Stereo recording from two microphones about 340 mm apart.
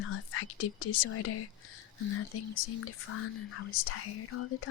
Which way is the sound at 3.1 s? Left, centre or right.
Left.